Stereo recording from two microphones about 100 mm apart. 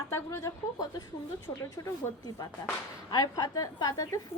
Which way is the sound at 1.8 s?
40° left (ahead or behind).